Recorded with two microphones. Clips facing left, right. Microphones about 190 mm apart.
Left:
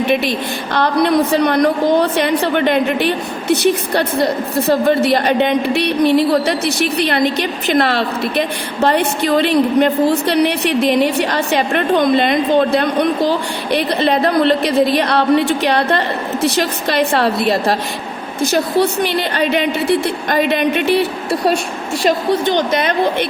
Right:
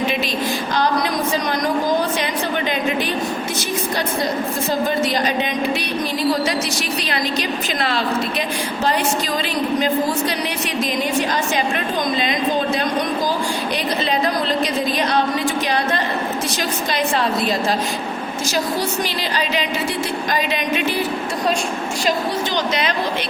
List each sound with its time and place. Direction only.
0.1 s a woman's voice: 60° left (ahead or behind)
22.3 s a woman's voice: 55° left (ahead or behind)